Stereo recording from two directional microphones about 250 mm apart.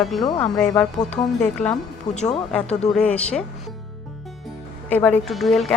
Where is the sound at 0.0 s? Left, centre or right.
Centre.